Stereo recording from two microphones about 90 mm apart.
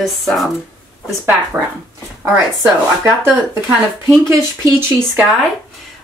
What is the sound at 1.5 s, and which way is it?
Speech, 30° right (ahead or behind).